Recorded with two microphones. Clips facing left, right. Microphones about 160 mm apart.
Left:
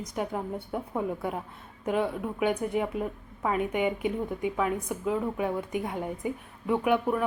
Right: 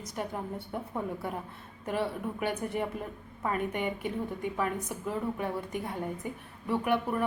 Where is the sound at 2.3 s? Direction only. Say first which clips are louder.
Left 6 dB; 5° left (ahead or behind).